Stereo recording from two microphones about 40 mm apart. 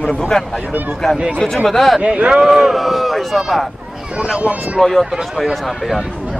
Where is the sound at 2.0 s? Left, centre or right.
Right.